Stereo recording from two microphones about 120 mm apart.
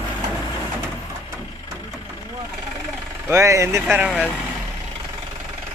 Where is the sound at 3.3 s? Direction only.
25° right (ahead or behind).